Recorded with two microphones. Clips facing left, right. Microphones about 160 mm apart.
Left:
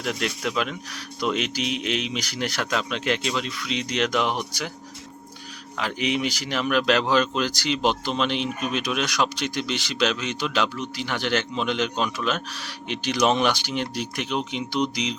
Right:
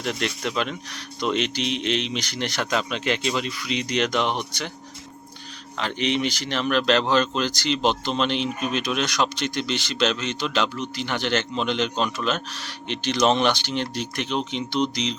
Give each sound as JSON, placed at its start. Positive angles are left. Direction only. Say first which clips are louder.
{"t": 0.0, "sound": "speech", "louder": "even", "side_deg": 0}
{"t": 5.7, "sound": "speech", "louder": "right 1 dB", "side_deg": 5}